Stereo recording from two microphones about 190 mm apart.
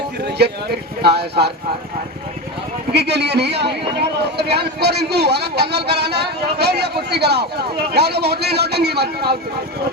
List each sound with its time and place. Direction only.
0.3 s a man's voice: 60° right (ahead or behind)
2.9 s a man's voice: 60° right (ahead or behind)